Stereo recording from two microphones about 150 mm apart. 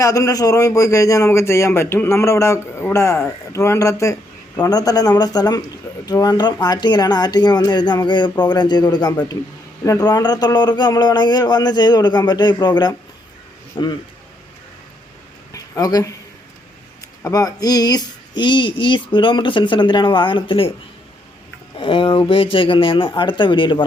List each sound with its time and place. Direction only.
0.0 s a man's voice: 20° left (ahead or behind)
15.5 s speech: 25° left (ahead or behind)
17.2 s speech: 25° left (ahead or behind)
21.8 s speech: 35° left (ahead or behind)